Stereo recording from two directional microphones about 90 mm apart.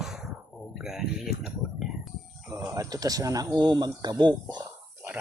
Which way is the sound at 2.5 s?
35° right (ahead or behind).